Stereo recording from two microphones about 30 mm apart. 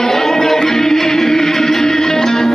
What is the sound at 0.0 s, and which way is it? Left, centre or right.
Music, centre.